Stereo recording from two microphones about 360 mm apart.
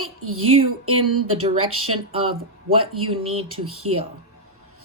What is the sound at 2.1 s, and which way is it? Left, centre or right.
Speech, centre.